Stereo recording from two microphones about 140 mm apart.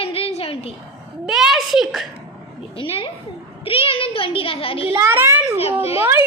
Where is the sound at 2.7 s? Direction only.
40° left (ahead or behind).